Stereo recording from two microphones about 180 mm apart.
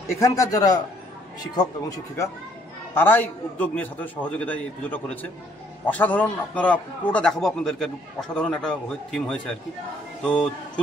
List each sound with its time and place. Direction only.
0.2 s a man's voice: 20° left (ahead or behind)